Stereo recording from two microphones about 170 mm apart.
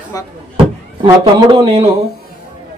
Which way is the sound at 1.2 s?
30° right (ahead or behind).